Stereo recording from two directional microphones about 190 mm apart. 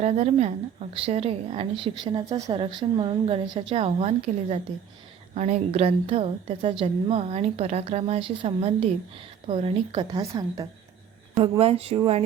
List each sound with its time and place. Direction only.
0.0 s a woman's voice: 35° right (ahead or behind)